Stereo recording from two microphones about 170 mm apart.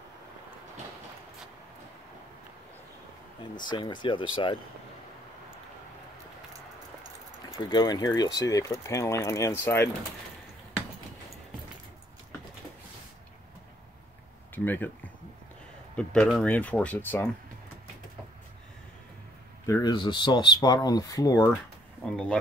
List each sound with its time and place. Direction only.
3.5 s speech: 25° left (ahead or behind)
7.7 s speech: 20° left (ahead or behind)
14.5 s speech: 10° left (ahead or behind)
16.0 s speech: 5° left (ahead or behind)
19.6 s speech: 20° left (ahead or behind)
22.0 s speech: 5° left (ahead or behind)